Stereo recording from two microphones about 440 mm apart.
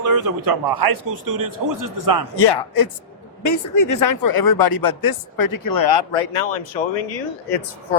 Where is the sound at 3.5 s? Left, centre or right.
Left.